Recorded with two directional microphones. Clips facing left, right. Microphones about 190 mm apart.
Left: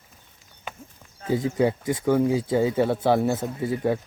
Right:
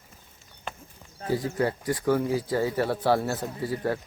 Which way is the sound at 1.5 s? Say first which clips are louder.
Left 7 dB; 15° left (ahead or behind).